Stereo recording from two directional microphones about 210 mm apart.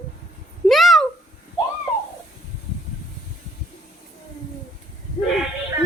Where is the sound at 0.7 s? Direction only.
Centre (ahead or behind).